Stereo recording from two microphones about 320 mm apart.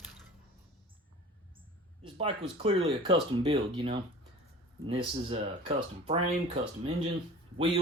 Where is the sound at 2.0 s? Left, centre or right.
Centre.